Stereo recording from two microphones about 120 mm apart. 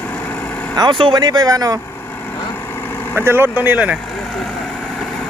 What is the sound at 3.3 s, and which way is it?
Speech, 20° right (ahead or behind).